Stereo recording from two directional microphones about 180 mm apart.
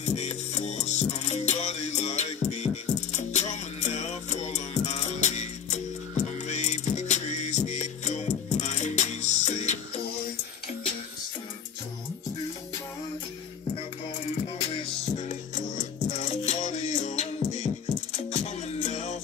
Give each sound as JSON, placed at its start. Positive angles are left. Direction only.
{"t": 0.0, "sound": "music", "side_deg": 40}
{"t": 14.7, "sound": "music", "side_deg": 35}